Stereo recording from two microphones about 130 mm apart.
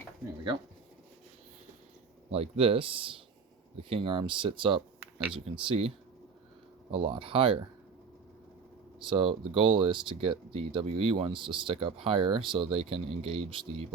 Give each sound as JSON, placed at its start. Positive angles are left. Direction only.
{"t": 2.3, "sound": "speech", "side_deg": -45}
{"t": 6.9, "sound": "speech", "side_deg": -40}
{"t": 9.0, "sound": "speech", "side_deg": -40}